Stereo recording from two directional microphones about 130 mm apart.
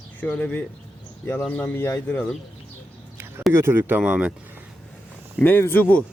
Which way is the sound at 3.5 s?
20° right (ahead or behind).